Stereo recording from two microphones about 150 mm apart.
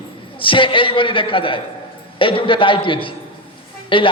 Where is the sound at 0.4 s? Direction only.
35° left (ahead or behind).